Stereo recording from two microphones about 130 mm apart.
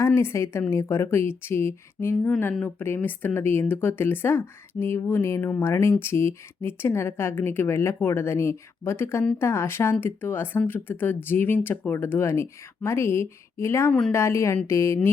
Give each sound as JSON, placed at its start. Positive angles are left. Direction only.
{"t": 0.0, "sound": "speech", "side_deg": 20}